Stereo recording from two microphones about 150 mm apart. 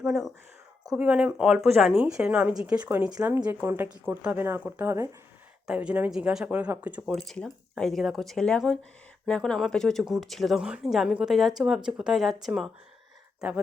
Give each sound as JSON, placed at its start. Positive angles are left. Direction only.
{"t": 0.0, "sound": "speech", "side_deg": 0}
{"t": 7.0, "sound": "speech", "side_deg": 0}